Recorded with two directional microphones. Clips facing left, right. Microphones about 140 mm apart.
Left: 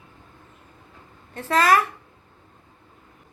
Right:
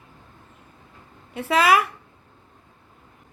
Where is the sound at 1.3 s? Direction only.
10° right (ahead or behind).